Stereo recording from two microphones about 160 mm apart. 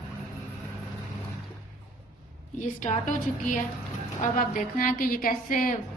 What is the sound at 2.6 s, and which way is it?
A woman's voice, 50° left (ahead or behind).